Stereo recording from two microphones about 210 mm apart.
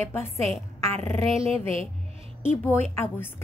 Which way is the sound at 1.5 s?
30° right (ahead or behind).